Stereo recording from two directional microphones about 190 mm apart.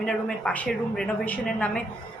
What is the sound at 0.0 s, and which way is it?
A woman's voice, 5° left (ahead or behind).